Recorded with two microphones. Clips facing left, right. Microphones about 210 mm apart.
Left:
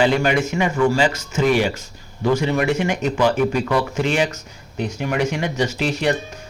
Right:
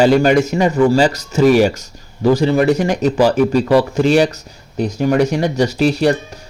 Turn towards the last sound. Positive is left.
turn(degrees=-35)  # may be behind; listen again after turning